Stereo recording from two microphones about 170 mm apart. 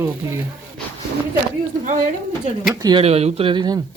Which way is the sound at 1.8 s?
50° right (ahead or behind).